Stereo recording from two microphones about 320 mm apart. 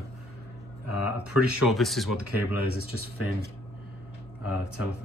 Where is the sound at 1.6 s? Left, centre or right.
Centre.